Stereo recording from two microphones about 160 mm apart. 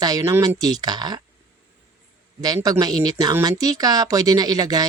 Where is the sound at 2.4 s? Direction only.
25° right (ahead or behind).